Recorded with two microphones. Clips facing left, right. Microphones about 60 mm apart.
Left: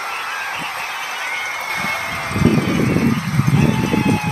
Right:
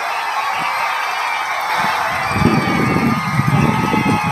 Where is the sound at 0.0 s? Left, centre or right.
Right.